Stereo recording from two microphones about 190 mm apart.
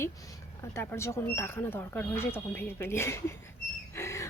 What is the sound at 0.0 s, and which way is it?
Speech, 15° left (ahead or behind).